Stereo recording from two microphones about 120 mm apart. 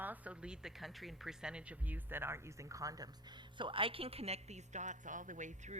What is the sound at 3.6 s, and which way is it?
A woman's voice, 45° right (ahead or behind).